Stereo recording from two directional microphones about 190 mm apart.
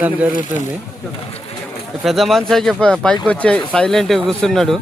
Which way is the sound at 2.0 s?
Centre (ahead or behind).